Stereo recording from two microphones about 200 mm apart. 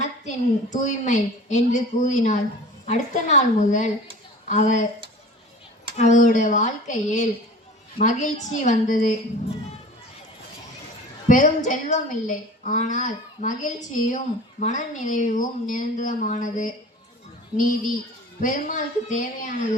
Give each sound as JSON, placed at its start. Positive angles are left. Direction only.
{"t": 0.0, "sound": "a woman's voice", "side_deg": 35}
{"t": 6.0, "sound": "a woman's voice", "side_deg": 40}
{"t": 11.3, "sound": "a woman's voice", "side_deg": 40}